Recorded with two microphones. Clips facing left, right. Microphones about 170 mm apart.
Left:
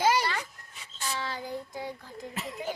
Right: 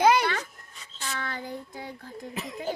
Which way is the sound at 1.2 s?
55° right (ahead or behind).